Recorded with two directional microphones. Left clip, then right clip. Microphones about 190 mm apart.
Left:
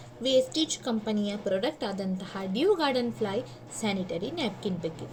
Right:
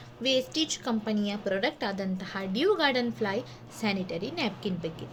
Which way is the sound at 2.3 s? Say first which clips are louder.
Left 1 dB; centre (ahead or behind).